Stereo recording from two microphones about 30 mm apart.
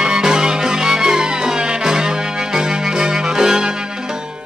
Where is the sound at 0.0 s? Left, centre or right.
Right.